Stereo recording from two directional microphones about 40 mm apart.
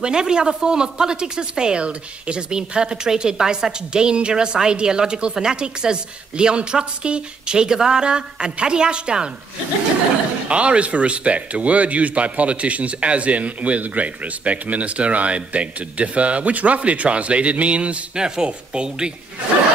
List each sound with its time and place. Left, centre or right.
0.0 s a woman's voice: centre
10.5 s speech: right